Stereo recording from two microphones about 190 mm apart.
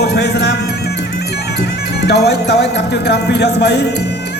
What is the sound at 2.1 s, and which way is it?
Speech, 60° left (ahead or behind).